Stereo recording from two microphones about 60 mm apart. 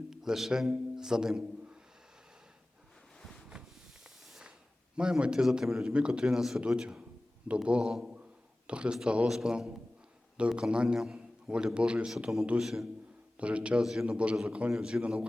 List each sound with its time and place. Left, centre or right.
0.1 s a man's voice: centre
3.5 s a sound: centre
4.9 s a man's voice: centre
12.5 s a man's voice: centre
13.4 s a man's voice: centre
13.8 s a man's voice: centre
14.3 s a man's voice: centre